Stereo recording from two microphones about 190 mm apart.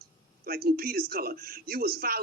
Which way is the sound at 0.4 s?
50° right (ahead or behind).